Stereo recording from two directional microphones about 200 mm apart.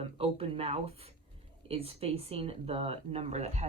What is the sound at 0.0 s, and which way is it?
Speech, 30° right (ahead or behind).